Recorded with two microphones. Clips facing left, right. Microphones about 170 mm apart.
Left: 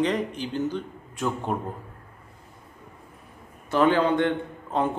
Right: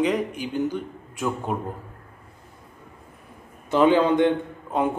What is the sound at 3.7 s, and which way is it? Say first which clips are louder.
A man's voice: right 3 dB; 15° right (ahead or behind).